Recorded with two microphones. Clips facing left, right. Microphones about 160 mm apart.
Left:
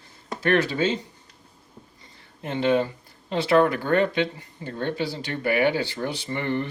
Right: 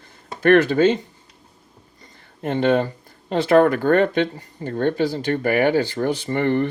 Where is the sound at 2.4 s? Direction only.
50° right (ahead or behind).